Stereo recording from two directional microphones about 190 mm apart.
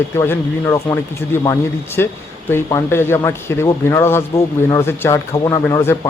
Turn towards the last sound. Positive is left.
turn(degrees=10)  # may be behind; listen again after turning